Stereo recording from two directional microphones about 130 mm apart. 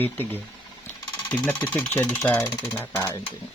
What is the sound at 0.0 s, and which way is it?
Speech, 15° left (ahead or behind).